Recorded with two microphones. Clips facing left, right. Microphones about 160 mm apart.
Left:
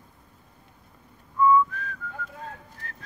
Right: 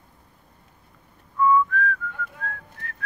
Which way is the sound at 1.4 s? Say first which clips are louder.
Right 1 dB; 25° left (ahead or behind).